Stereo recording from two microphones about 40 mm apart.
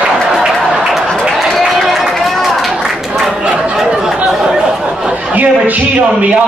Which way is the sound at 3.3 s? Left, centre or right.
Right.